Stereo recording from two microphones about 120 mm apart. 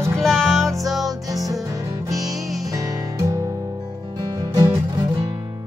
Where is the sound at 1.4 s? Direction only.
30° right (ahead or behind).